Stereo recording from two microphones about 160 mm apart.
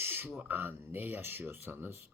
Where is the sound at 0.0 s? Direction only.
15° right (ahead or behind).